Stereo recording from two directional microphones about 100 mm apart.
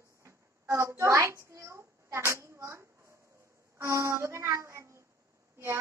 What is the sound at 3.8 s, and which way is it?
Music, 30° right (ahead or behind).